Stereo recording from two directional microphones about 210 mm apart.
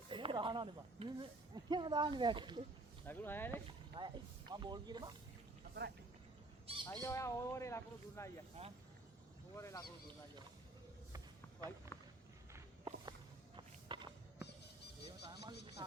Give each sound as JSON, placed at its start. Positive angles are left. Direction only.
{"t": 0.1, "sound": "speech", "side_deg": -25}
{"t": 3.1, "sound": "speech", "side_deg": 10}
{"t": 3.7, "sound": "speech", "side_deg": -20}
{"t": 6.7, "sound": "squawk", "side_deg": -25}
{"t": 7.0, "sound": "speech", "side_deg": 15}
{"t": 8.6, "sound": "speech", "side_deg": -30}
{"t": 9.6, "sound": "speech", "side_deg": 15}
{"t": 11.9, "sound": "walk", "side_deg": 15}
{"t": 12.5, "sound": "walk", "side_deg": -20}
{"t": 13.6, "sound": "a sound", "side_deg": -20}
{"t": 15.8, "sound": "speech", "side_deg": -20}